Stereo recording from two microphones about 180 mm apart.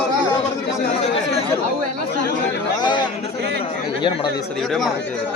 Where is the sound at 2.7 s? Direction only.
25° left (ahead or behind).